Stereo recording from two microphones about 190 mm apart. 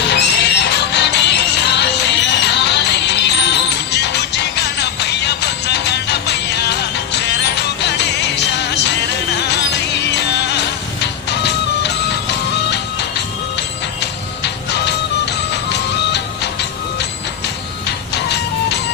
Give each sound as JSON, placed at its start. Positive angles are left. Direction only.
{"t": 0.1, "sound": "music", "side_deg": 65}